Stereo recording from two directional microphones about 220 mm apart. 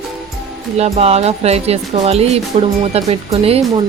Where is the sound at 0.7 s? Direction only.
30° right (ahead or behind).